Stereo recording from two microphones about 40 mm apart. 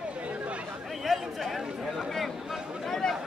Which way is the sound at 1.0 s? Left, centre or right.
Centre.